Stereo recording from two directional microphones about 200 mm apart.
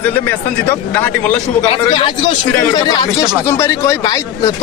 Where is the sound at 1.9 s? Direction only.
25° left (ahead or behind).